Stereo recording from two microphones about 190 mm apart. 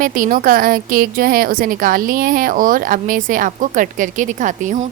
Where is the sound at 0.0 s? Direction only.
45° right (ahead or behind).